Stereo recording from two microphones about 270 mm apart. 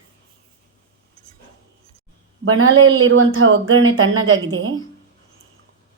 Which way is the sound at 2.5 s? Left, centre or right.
Right.